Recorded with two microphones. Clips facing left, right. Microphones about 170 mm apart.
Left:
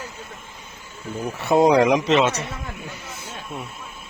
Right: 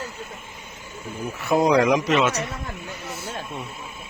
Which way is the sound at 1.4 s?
25° left (ahead or behind).